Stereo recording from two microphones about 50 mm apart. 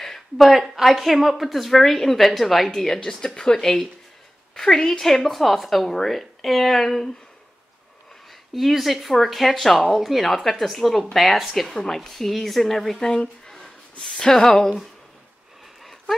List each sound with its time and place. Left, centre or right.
0.0 s a sound: centre
0.5 s a woman's voice: centre
8.5 s a woman's voice: centre
13.0 s speech: centre
13.5 s a sound: centre
15.8 s dog: centre